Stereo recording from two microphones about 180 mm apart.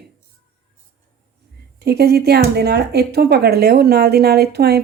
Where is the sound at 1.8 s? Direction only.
60° right (ahead or behind).